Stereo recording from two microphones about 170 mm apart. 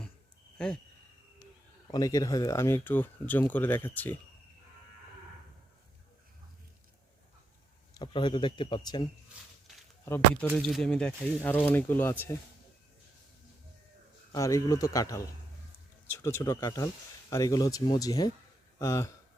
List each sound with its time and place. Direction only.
1.9 s speech: 20° left (ahead or behind)
7.9 s speech: 25° left (ahead or behind)
10.5 s speech: centre (ahead or behind)
14.3 s speech: 20° left (ahead or behind)